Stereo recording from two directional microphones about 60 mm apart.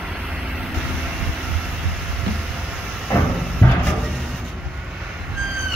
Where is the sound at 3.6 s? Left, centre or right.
Left.